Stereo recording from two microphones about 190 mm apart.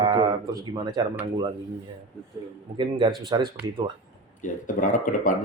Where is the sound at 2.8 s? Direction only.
25° right (ahead or behind).